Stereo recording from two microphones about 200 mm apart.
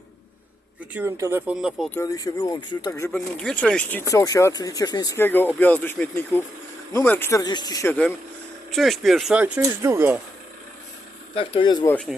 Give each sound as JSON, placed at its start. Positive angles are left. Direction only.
{"t": 0.9, "sound": "speech", "side_deg": -15}
{"t": 1.9, "sound": "speech", "side_deg": 15}
{"t": 3.2, "sound": "speech", "side_deg": 5}
{"t": 11.3, "sound": "speech", "side_deg": 25}
{"t": 11.9, "sound": "speech", "side_deg": 5}